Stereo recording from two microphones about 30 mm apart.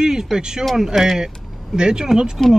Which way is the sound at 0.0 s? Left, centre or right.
Centre.